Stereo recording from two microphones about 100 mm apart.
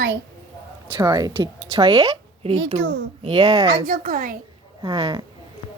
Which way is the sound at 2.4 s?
80° right.